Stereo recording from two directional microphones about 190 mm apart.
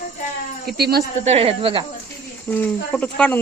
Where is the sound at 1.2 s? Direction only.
30° right (ahead or behind).